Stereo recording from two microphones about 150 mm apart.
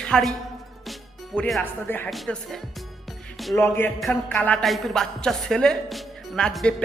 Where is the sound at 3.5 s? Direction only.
15° left (ahead or behind).